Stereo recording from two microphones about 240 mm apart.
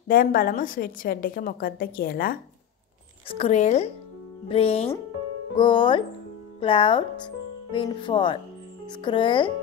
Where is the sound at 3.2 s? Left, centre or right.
Left.